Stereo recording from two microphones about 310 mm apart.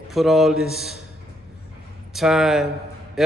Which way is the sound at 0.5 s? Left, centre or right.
Left.